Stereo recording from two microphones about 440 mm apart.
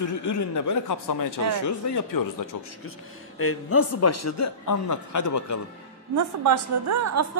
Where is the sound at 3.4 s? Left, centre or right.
Left.